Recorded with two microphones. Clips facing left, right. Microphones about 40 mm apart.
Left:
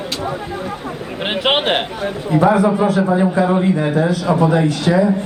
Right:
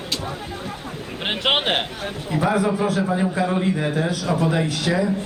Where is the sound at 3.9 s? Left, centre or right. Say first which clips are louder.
Left 7 dB; left.